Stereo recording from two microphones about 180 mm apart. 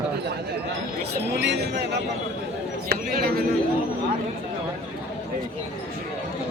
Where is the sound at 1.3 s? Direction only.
70° right (ahead or behind).